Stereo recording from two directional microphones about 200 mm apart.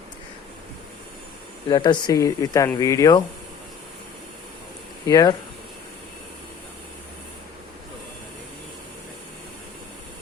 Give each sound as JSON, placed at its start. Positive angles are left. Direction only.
{"t": 1.7, "sound": "speech", "side_deg": 20}
{"t": 5.0, "sound": "speech", "side_deg": 15}